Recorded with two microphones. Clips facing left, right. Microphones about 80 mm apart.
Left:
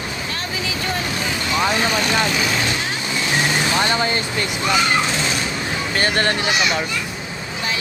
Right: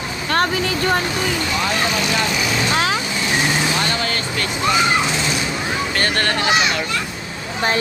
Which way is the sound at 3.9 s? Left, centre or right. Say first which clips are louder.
Left 2 dB; left.